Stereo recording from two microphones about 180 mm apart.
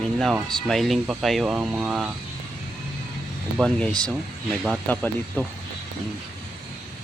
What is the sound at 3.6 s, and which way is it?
Speech, 5° left (ahead or behind).